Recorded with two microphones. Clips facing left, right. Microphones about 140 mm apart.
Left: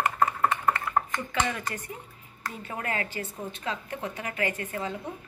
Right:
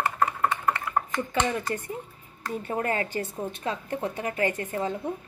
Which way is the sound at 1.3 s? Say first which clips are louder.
Right 3 dB; 25° right (ahead or behind).